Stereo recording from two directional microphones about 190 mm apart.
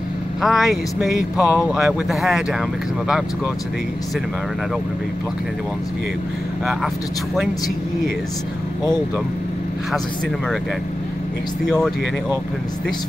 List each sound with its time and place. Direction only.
0.4 s speech: centre (ahead or behind)
6.6 s speech: centre (ahead or behind)